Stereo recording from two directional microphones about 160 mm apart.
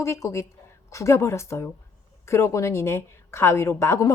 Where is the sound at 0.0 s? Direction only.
20° left (ahead or behind).